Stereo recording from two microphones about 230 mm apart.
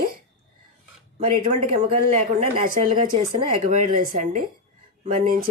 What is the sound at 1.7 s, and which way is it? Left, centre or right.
Speech, right.